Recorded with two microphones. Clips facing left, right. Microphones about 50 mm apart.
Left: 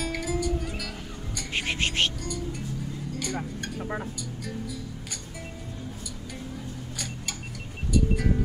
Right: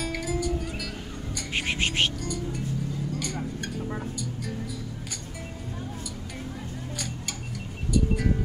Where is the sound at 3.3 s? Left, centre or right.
Left.